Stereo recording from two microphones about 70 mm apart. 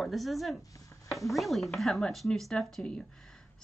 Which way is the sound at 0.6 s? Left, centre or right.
Left.